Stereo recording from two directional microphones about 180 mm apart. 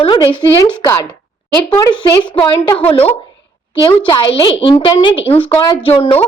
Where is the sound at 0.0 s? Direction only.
25° left (ahead or behind).